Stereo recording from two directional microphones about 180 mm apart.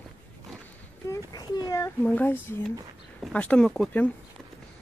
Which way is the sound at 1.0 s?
20° left (ahead or behind).